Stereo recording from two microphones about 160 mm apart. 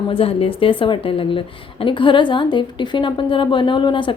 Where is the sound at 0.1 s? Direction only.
35° left (ahead or behind).